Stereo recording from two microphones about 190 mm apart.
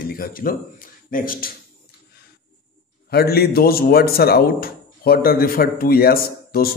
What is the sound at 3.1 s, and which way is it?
Speech, 55° left (ahead or behind).